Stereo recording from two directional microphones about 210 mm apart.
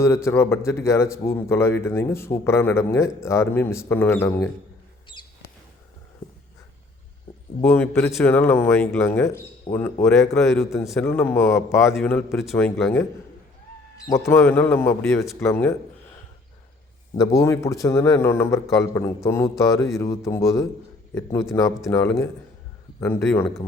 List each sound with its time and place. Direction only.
0.0 s a man's voice: 10° left (ahead or behind)
5.1 s a sound: 25° left (ahead or behind)
7.6 s a man's voice: 10° left (ahead or behind)
14.1 s a man's voice: 10° left (ahead or behind)
17.2 s a man's voice: 15° left (ahead or behind)